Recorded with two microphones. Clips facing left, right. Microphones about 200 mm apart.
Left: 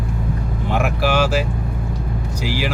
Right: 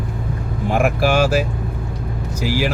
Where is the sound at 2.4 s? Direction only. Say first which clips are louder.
Right 4 dB; 45° right (ahead or behind).